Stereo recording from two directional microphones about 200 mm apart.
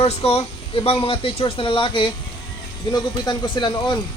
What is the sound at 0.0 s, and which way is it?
Speech, 30° left (ahead or behind).